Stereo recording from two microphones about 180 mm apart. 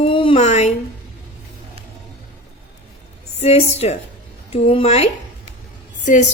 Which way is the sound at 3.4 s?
35° left (ahead or behind).